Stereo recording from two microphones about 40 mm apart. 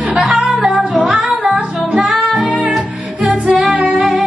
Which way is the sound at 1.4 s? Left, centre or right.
Right.